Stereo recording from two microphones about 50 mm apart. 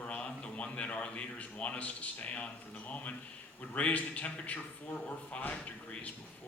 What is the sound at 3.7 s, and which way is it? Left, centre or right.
Speech, left.